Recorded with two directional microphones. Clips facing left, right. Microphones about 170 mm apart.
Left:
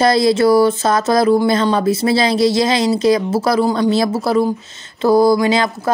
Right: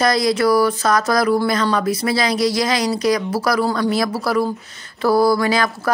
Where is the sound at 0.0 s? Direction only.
25° left (ahead or behind).